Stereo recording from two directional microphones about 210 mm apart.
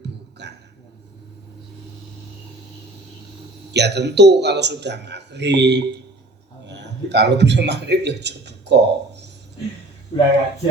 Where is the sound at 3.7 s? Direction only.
55° right (ahead or behind).